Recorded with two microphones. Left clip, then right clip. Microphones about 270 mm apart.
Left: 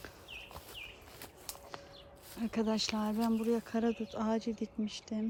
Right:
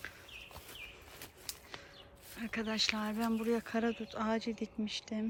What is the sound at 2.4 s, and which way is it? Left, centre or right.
Speech, centre.